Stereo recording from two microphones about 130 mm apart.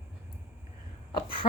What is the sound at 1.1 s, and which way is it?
Speech, 40° left (ahead or behind).